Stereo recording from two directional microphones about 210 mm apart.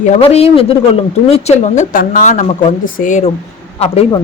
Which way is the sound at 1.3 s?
40° left (ahead or behind).